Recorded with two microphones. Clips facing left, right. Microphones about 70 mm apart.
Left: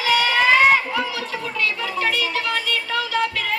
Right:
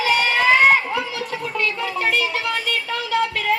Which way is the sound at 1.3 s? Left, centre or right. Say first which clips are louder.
Right 1 dB; right.